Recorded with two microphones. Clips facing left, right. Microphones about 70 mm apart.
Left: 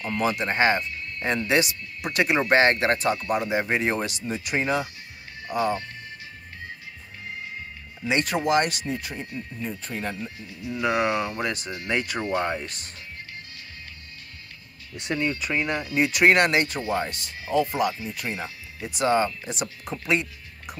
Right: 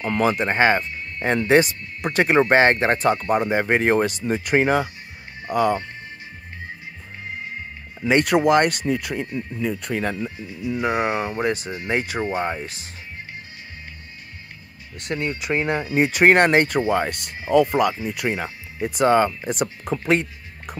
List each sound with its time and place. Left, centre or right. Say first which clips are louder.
0.0 s speech: right 5 dB; right
8.3 s speech: right 5 dB; right
9.6 s speech: right 8 dB; right
10.8 s speech: right 1 dB; right
15.0 s speech: right 1 dB; centre
15.2 s speech: right 4 dB; right
17.5 s speech: right 6 dB; right
18.0 s speech: right 7 dB; right
18.8 s speech: right 5 dB; right